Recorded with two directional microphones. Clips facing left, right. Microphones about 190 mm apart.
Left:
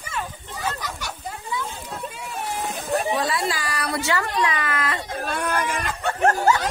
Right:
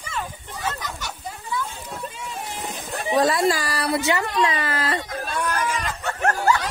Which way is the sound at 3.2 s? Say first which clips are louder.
Right 6 dB; 45° right (ahead or behind).